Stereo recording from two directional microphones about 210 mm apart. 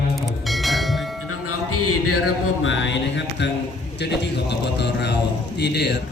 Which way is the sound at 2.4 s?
65° left (ahead or behind).